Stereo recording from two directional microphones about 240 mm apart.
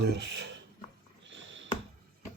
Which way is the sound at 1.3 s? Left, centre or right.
Right.